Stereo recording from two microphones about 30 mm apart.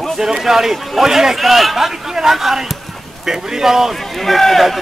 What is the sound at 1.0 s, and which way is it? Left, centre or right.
A man's voice, centre.